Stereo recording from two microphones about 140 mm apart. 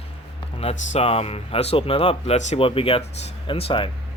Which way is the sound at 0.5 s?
45° left (ahead or behind).